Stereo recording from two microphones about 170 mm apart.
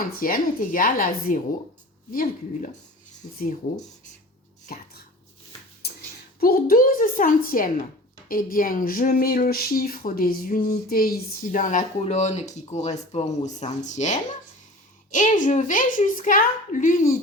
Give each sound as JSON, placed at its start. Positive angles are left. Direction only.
{"t": 0.2, "sound": "a woman's voice", "side_deg": 55}
{"t": 4.7, "sound": "speech", "side_deg": 60}
{"t": 5.8, "sound": "a sound", "side_deg": 70}
{"t": 6.4, "sound": "a woman's voice", "side_deg": 60}